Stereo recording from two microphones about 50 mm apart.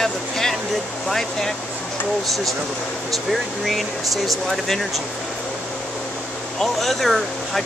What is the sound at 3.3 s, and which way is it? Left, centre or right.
Speech, centre.